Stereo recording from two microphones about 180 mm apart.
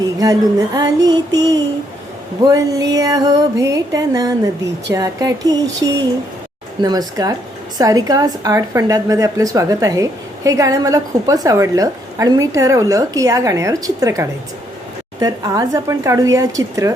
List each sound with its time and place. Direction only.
0.2 s a woman's voice: 20° right (ahead or behind)
2.4 s a woman's voice: 20° right (ahead or behind)